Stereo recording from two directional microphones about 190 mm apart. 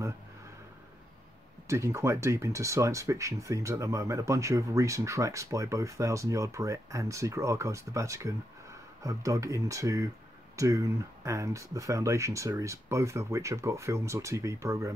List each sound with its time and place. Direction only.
1.7 s speech: 15° right (ahead or behind)